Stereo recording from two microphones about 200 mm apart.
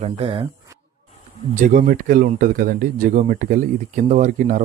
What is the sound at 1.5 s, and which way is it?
Speech, 40° right (ahead or behind).